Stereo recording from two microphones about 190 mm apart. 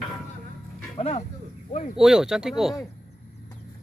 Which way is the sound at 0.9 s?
35° left (ahead or behind).